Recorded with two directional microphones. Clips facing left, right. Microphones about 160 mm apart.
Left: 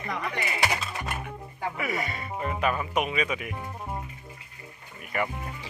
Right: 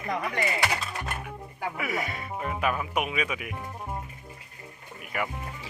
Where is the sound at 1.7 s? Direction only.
Centre (ahead or behind).